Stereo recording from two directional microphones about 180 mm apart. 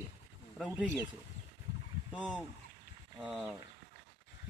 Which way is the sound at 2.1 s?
5° right (ahead or behind).